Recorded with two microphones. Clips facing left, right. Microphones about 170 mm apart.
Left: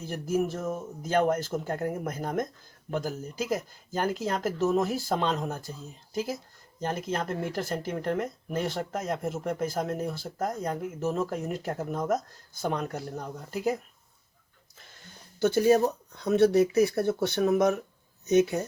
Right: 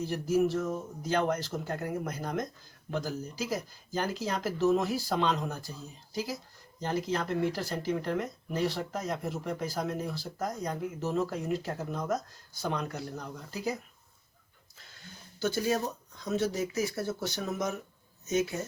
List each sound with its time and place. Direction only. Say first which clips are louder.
0.1 s speech: even; 50° left (ahead or behind)
4.3 s speech: right 2 dB; 45° left (ahead or behind)
6.8 s speech: left 1 dB; 50° left (ahead or behind)
15.4 s speech: left 8 dB; 60° left (ahead or behind)